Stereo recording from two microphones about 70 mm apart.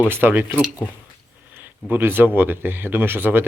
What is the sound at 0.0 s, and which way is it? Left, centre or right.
Speech, right.